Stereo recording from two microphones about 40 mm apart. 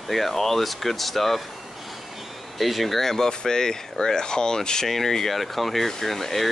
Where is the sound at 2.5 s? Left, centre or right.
Centre.